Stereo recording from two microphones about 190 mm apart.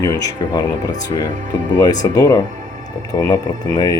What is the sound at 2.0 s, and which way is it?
Speech, 20° left (ahead or behind).